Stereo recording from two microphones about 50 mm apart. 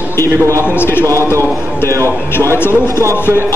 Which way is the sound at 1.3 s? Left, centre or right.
Left.